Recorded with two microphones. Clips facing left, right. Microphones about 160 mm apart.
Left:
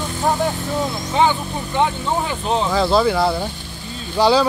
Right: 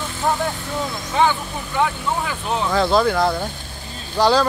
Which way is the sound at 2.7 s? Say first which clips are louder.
Even; 5° left (ahead or behind).